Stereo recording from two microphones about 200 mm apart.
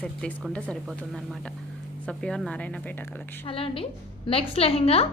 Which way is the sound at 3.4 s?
30° left (ahead or behind).